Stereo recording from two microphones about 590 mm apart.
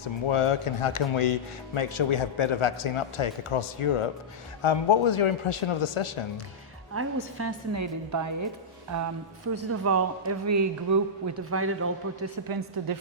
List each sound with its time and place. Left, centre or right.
0.3 s speech: left
6.9 s a man's voice: right
12.5 s a woman's voice: right